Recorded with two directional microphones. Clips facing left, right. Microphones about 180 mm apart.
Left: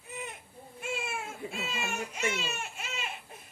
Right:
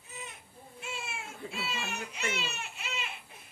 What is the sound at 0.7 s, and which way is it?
Baby cry, 50° left (ahead or behind).